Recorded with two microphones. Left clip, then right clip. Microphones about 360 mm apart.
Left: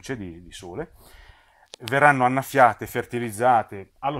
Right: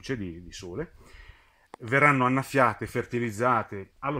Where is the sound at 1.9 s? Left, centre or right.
Centre.